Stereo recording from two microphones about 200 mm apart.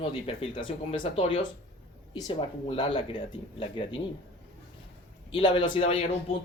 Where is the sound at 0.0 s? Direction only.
30° left (ahead or behind).